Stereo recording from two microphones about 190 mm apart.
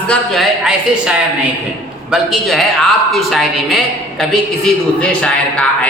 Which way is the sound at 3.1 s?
Centre (ahead or behind).